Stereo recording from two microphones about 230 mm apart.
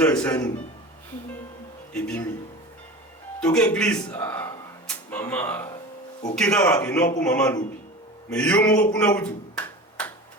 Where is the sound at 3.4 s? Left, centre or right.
Centre.